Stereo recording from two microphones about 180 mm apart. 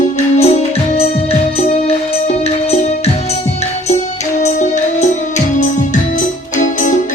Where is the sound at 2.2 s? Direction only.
35° left (ahead or behind).